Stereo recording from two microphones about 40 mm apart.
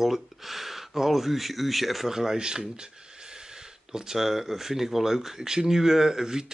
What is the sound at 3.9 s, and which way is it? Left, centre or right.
Speech, centre.